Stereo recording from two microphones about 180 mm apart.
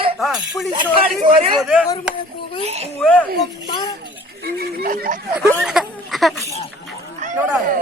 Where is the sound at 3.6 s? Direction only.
25° left (ahead or behind).